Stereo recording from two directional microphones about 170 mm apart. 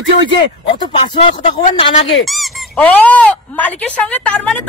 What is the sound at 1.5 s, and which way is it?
Speech, 40° left (ahead or behind).